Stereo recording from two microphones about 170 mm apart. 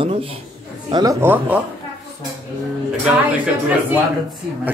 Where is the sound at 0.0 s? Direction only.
35° right (ahead or behind).